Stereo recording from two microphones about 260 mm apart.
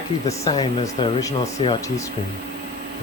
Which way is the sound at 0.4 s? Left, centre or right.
Centre.